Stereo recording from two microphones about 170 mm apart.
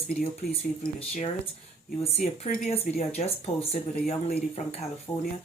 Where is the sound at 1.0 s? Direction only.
35° left (ahead or behind); by 3.3 s 50° left (ahead or behind).